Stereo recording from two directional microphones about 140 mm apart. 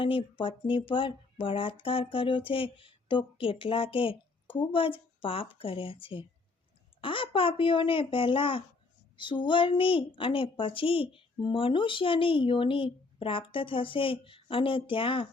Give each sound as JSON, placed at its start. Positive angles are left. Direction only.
{"t": 0.0, "sound": "speech", "side_deg": 40}